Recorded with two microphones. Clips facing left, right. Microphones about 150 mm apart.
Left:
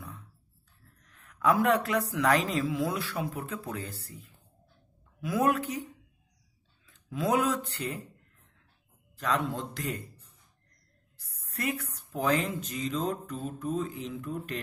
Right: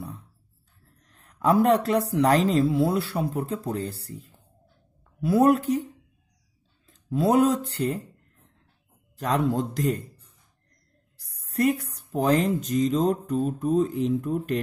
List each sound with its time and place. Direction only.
1.0 s speech: 35° right (ahead or behind)
6.9 s speech: 35° right (ahead or behind)
9.1 s speech: 45° right (ahead or behind)
11.1 s a woman's voice: 40° right (ahead or behind)